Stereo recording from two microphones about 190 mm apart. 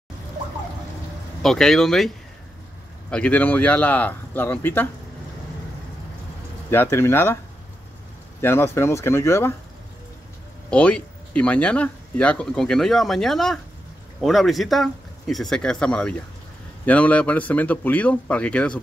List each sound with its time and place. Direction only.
1.4 s speech: centre (ahead or behind)
6.7 s speech: 10° left (ahead or behind)
8.4 s speech: 15° left (ahead or behind)
10.7 s speech: 5° left (ahead or behind)